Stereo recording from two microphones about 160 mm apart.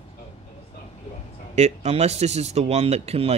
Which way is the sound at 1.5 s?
45° right (ahead or behind).